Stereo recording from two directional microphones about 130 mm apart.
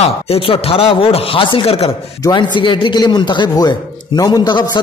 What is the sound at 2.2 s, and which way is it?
A man's voice, 35° left (ahead or behind).